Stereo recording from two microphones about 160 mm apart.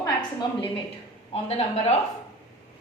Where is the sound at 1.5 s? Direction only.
40° left (ahead or behind).